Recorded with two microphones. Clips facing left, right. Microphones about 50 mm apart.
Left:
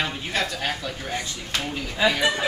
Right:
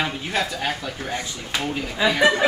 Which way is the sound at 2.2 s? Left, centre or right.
Right.